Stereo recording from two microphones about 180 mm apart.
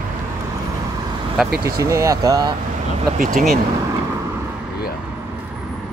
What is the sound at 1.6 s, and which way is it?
Speech, 15° right (ahead or behind).